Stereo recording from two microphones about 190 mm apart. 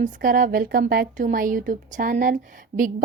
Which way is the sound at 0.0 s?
45° right (ahead or behind).